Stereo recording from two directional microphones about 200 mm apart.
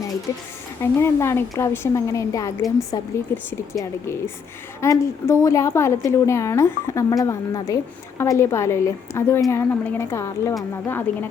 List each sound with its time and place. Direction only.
0.3 s a woman's voice: 15° left (ahead or behind)
4.8 s a woman's voice: 15° left (ahead or behind)